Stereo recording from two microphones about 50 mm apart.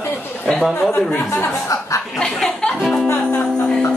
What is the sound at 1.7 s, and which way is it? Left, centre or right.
Speech, left.